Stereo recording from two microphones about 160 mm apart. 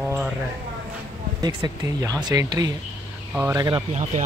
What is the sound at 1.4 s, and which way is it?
Speech, 25° right (ahead or behind).